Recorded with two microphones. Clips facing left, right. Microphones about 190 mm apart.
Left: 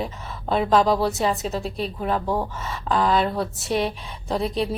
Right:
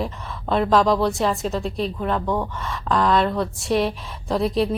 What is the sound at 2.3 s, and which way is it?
Speech, 30° left (ahead or behind).